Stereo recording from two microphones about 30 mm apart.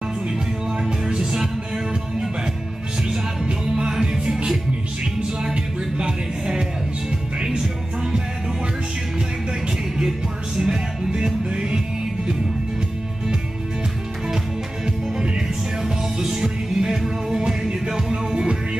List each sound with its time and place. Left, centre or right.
0.8 s music: right
3.4 s music: right
3.9 s music: centre
5.4 s music: right
10.6 s music: right
16.2 s music: centre